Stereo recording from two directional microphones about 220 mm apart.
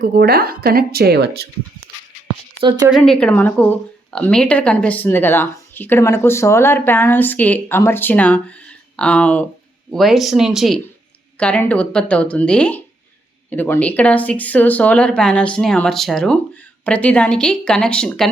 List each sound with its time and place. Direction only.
0.0 s speech: 45° right (ahead or behind)
2.9 s a woman's voice: 5° left (ahead or behind)